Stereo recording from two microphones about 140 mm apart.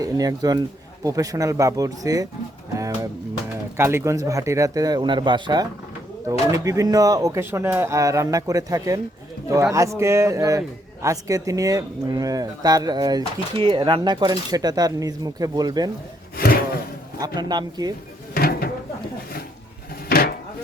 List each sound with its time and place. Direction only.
0.0 s speech: 25° right (ahead or behind)
2.7 s music: 25° right (ahead or behind)
3.8 s speech: 15° right (ahead or behind)
6.7 s speech: 25° right (ahead or behind)
17.2 s speech: 30° right (ahead or behind)
18.3 s a sound: 90° left
20.1 s a sound: 90° left